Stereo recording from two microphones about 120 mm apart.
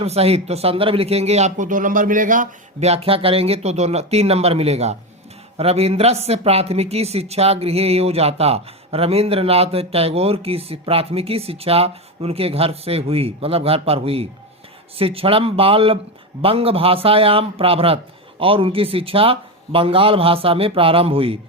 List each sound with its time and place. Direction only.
0.0 s a man's voice: 60° right (ahead or behind)